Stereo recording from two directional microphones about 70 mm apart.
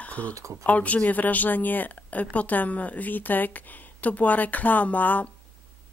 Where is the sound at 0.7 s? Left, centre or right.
Left.